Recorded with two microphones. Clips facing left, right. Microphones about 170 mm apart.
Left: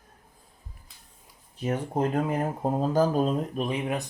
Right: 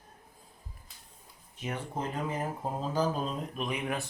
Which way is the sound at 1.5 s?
40° left (ahead or behind).